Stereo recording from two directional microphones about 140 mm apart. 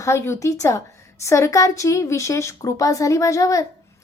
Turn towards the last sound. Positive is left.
turn(degrees=25)  # may be behind; listen again after turning